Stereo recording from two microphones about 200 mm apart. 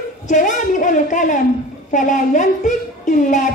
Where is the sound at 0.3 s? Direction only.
40° left (ahead or behind).